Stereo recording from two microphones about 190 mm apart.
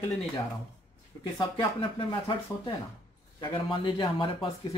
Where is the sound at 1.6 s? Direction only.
25° left (ahead or behind).